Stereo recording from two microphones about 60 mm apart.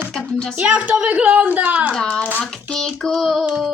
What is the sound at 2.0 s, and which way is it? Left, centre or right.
Speech, centre.